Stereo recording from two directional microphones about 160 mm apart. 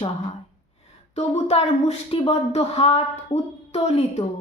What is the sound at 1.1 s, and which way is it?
Speech, 40° left (ahead or behind).